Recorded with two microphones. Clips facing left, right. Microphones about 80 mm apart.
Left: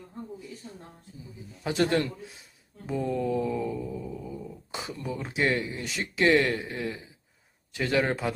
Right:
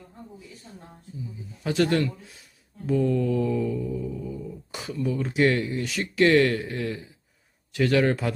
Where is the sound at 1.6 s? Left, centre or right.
Left.